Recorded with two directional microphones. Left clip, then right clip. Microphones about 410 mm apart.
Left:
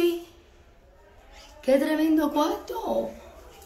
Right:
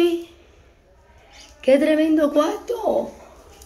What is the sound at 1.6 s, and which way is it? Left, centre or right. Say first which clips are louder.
A woman's voice: right 6 dB; centre.